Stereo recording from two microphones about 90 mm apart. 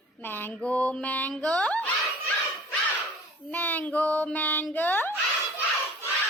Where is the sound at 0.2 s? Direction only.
25° left (ahead or behind).